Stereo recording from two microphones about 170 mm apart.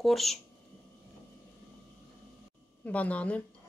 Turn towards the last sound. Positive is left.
turn(degrees=10)  # may be behind; listen again after turning